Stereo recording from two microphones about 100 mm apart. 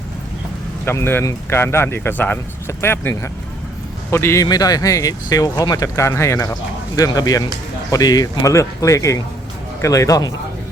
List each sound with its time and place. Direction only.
0.9 s speech: 25° left (ahead or behind)
4.4 s speech: 40° left (ahead or behind)